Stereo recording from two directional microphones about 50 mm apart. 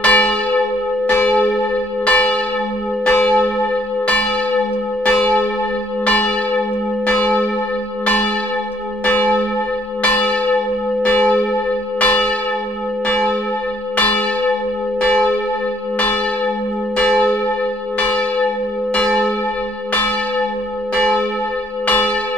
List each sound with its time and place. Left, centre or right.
0.0 s church bell: left
13.9 s church bell: left
16.9 s church bell: left
20.9 s church bell: left